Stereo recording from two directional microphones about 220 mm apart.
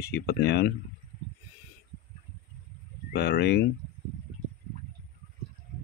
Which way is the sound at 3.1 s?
45° left (ahead or behind).